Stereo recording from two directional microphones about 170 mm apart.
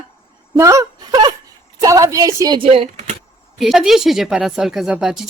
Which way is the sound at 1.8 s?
20° right (ahead or behind).